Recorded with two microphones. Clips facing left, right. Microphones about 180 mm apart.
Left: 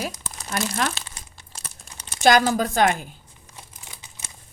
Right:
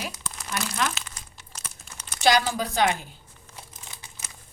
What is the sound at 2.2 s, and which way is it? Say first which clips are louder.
Speech: left 4 dB; 45° left (ahead or behind).